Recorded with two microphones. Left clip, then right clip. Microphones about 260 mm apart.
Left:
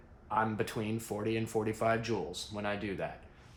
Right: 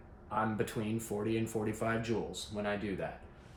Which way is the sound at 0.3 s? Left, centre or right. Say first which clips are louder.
Left 2 dB; left.